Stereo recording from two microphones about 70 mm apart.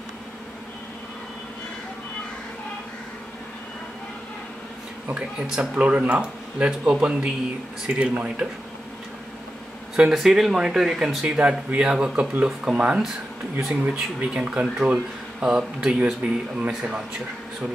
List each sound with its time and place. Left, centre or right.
5.1 s speech: centre
10.1 s speech: centre
11.3 s speech: centre